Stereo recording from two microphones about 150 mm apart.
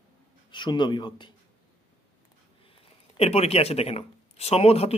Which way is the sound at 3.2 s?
45° left (ahead or behind).